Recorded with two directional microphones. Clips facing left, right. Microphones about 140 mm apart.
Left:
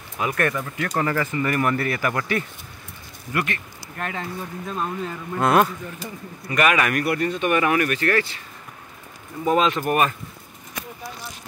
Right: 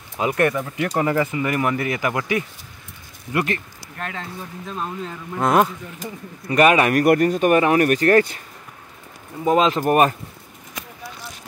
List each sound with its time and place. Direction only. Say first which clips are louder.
0.2 s speech: right 4 dB; 20° right (ahead or behind)
3.3 s speech: right 4 dB; 30° right (ahead or behind)
3.9 s speech: left 2 dB; 5° left (ahead or behind)
5.4 s speech: right 1 dB; 15° right (ahead or behind)
6.5 s speech: right 5 dB; 35° right (ahead or behind)
7.1 s speech: right 6 dB; 45° right (ahead or behind)
9.4 s speech: right 2 dB; 25° right (ahead or behind)